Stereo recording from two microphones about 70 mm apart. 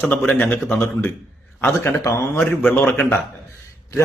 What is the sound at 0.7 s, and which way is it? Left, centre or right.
Speech, left.